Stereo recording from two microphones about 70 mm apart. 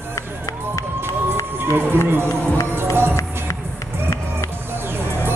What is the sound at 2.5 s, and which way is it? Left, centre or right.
Speech, left.